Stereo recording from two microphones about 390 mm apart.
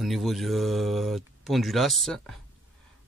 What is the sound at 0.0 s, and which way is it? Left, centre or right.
Speech, centre.